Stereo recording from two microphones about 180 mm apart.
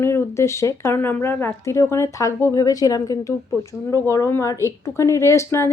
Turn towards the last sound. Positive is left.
turn(degrees=15)  # may be behind; listen again after turning